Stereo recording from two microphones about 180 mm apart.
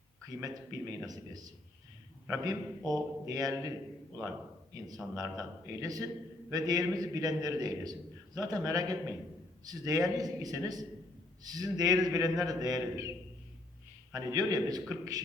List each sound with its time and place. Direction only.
0.3 s a man's voice: 20° right (ahead or behind)
5.1 s a man's voice: 20° right (ahead or behind)
14.1 s a man's voice: 20° right (ahead or behind)